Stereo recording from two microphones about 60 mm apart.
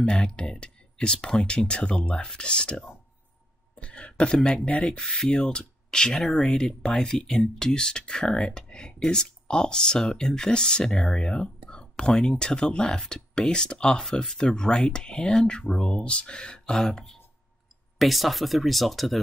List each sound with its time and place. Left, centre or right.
0.0 s speech: centre
3.7 s a sound: centre
4.6 s speech: centre